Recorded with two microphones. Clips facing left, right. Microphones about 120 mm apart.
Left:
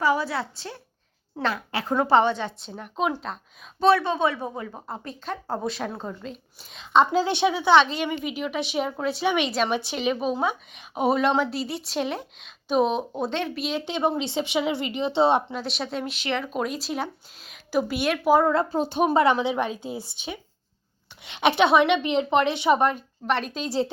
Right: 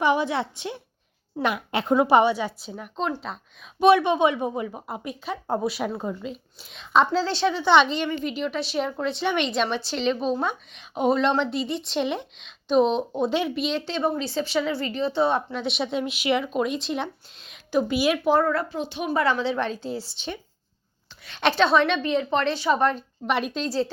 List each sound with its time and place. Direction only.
0.0 s a woman's voice: 20° right (ahead or behind); by 3.3 s 5° left (ahead or behind)
3.8 s speech: 15° right (ahead or behind); by 7.1 s centre (ahead or behind)
7.1 s a woman's voice: 15° left (ahead or behind)
13.8 s speech: 20° left (ahead or behind)
15.5 s speech: centre (ahead or behind)
18.3 s speech: 20° left (ahead or behind)
18.7 s speech: 40° left (ahead or behind)
19.1 s a woman's voice: 20° left (ahead or behind)
23.2 s speech: 5° right (ahead or behind)